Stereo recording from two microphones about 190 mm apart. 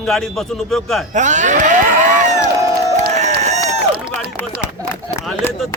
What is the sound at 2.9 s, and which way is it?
Crowd, 35° right (ahead or behind).